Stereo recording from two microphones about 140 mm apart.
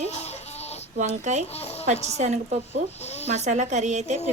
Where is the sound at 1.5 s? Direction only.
45° left (ahead or behind).